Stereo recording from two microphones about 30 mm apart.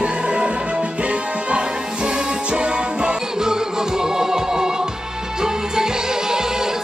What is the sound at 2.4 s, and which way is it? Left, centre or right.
Music, right.